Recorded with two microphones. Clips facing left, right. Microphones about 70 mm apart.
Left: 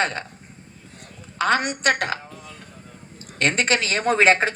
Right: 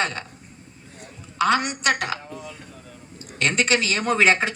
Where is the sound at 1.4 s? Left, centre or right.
Left.